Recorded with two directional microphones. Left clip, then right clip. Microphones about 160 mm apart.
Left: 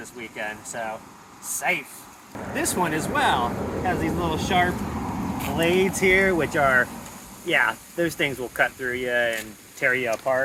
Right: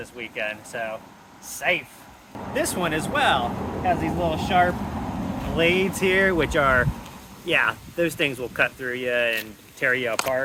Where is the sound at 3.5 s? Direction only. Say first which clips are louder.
Left 1 dB; 10° left (ahead or behind).